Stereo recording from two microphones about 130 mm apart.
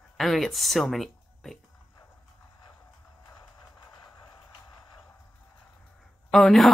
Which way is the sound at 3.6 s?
30° left (ahead or behind).